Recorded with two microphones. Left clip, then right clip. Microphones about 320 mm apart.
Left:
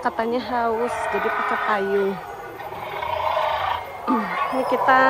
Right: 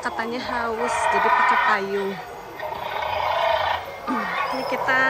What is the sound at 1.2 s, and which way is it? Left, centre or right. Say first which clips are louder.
Speech: right 6 dB; right.